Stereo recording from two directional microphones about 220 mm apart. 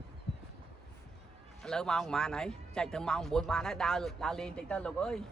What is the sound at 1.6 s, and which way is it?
Speech, 5° left (ahead or behind).